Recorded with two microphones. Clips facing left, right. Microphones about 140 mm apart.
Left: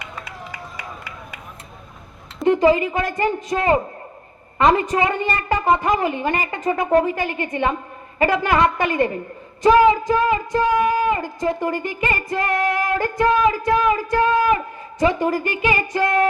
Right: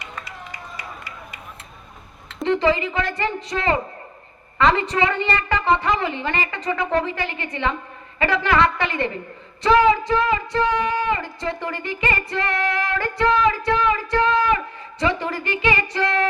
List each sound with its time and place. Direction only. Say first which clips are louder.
2.4 s music: left 4 dB; 45° left (ahead or behind)